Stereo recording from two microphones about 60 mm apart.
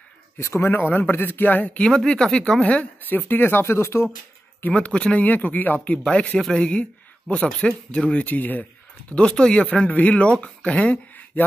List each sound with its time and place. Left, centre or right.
0.4 s a man's voice: left
1.9 s speech: centre; by 4.1 s left
4.6 s a man's voice: left
8.3 s a man's voice: left
9.1 s a man's voice: centre